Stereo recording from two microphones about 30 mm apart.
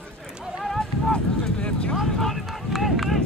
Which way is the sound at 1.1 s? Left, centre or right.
Left.